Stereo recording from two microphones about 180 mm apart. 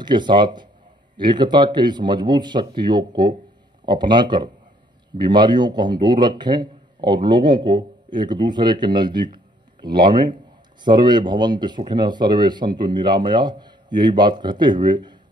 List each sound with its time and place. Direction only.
0.0 s speech: 25° right (ahead or behind)